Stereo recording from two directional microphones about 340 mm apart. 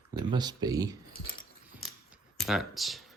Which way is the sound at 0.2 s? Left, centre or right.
Centre.